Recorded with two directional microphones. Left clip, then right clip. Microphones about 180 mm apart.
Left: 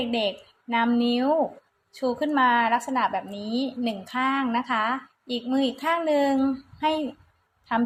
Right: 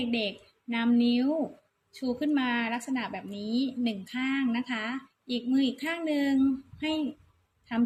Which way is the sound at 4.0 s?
35° left (ahead or behind).